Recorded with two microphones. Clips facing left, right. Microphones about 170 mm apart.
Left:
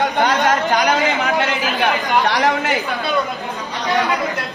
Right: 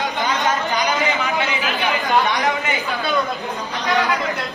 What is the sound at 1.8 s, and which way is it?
Chatter, 80° left.